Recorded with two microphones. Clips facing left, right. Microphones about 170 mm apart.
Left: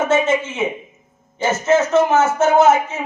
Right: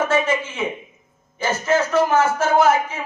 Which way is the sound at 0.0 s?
25° left (ahead or behind).